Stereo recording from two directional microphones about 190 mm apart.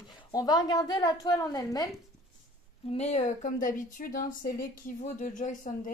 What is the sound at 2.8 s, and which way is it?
A woman's voice, 35° left (ahead or behind).